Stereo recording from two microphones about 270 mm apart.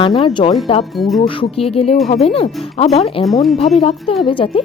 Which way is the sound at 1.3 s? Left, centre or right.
Centre.